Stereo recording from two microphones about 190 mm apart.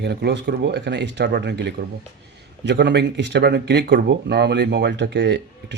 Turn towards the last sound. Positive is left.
turn(degrees=-65)  # may be behind; listen again after turning